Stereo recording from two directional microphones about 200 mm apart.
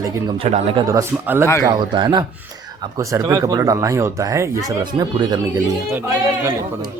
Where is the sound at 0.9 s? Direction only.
15° right (ahead or behind).